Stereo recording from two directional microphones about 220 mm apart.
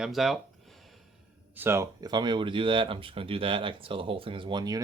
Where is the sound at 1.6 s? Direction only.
10° right (ahead or behind).